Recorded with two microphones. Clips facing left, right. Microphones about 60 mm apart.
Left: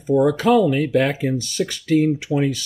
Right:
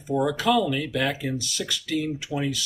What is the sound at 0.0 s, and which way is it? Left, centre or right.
Speech, left.